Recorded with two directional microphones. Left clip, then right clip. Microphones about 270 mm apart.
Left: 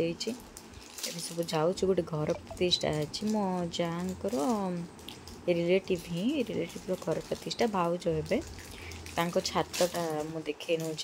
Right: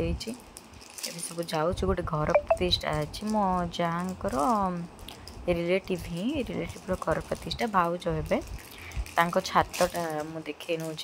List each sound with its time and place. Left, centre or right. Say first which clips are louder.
1.4 s speech: right 1 dB; centre